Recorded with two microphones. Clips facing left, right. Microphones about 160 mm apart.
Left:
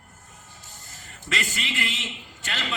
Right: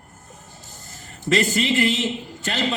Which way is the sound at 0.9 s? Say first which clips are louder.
Right 11 dB; 40° right (ahead or behind).